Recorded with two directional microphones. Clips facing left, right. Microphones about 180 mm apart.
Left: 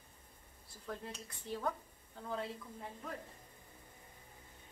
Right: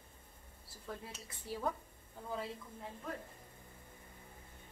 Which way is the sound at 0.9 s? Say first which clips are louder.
Left 2 dB; 5° right (ahead or behind).